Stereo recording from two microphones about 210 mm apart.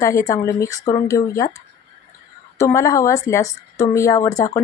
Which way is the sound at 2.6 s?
15° left (ahead or behind).